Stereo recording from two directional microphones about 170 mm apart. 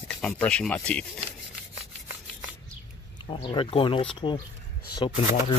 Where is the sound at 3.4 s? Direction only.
30° left (ahead or behind).